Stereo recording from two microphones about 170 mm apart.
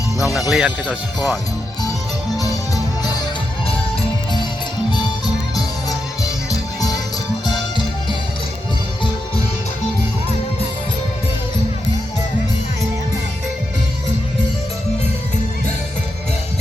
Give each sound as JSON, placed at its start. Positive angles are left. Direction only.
{"t": 0.5, "sound": "speech", "side_deg": -5}
{"t": 2.4, "sound": "music", "side_deg": 20}
{"t": 4.9, "sound": "music", "side_deg": 25}